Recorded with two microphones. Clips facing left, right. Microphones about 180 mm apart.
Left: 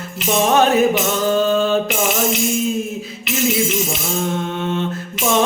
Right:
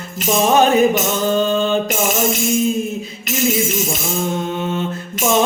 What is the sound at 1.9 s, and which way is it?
Music, 45° right (ahead or behind).